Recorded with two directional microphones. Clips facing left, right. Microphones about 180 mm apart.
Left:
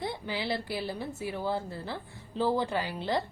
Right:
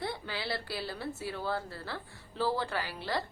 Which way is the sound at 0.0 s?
20° left (ahead or behind).